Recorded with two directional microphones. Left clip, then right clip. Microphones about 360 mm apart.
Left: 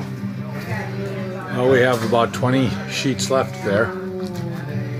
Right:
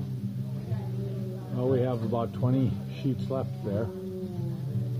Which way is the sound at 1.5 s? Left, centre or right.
Centre.